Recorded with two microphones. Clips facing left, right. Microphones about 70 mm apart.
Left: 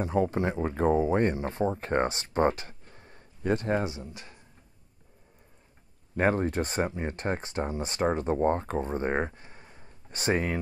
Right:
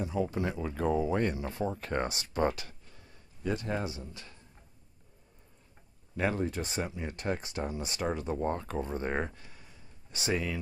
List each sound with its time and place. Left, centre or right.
0.0 s speech: left
0.4 s speech: left
3.8 s speech: left
6.1 s speech: left